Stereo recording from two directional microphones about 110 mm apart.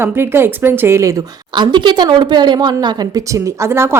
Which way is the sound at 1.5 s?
45° right (ahead or behind).